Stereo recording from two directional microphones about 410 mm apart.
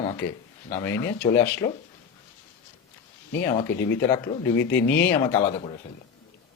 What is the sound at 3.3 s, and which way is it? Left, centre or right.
Speech, centre.